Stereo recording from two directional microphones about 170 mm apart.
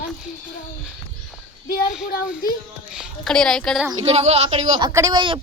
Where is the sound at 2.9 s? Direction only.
Centre (ahead or behind).